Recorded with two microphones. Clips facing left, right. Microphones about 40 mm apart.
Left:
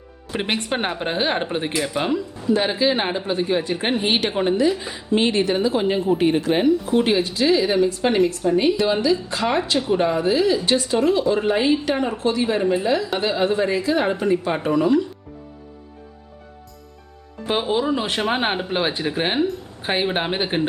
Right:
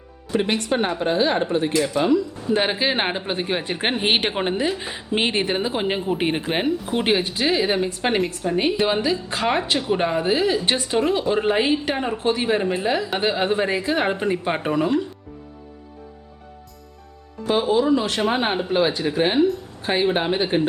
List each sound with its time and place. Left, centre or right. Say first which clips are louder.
0.3 s a woman's voice: right 2 dB; left
1.7 s speech: right 4 dB; centre
2.5 s speech: left 2 dB; right
6.1 s speech: left 4 dB; right
17.6 s speech: right 3 dB; centre